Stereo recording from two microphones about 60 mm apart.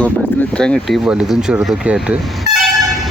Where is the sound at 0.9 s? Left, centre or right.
Centre.